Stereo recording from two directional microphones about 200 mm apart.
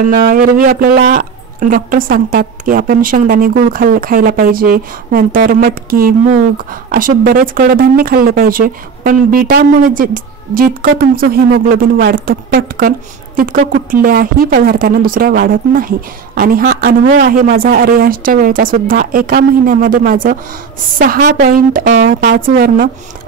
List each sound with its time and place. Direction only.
0.0 s speech: 45° right (ahead or behind)